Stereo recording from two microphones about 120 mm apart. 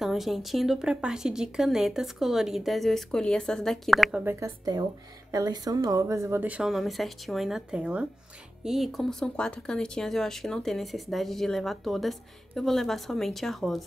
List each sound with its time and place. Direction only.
0.0 s speech: centre (ahead or behind)
4.2 s speech: 15° right (ahead or behind)
5.3 s a woman's voice: 30° right (ahead or behind)
6.4 s speech: 5° right (ahead or behind)